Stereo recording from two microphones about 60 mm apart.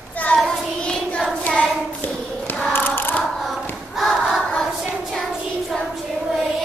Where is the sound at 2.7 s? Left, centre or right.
Left.